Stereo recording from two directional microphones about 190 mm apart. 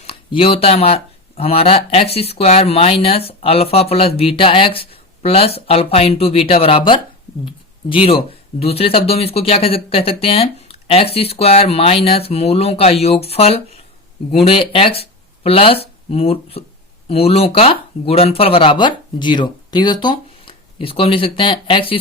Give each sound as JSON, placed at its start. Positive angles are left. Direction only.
{"t": 0.0, "sound": "speech", "side_deg": 30}